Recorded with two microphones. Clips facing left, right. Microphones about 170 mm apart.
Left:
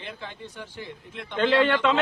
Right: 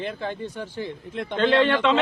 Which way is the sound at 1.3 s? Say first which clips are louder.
Right 2 dB; 10° left (ahead or behind).